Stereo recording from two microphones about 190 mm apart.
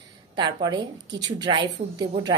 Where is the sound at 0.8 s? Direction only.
70° right (ahead or behind).